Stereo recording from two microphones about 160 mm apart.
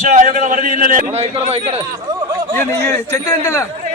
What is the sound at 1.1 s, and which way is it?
Speech, 40° right (ahead or behind).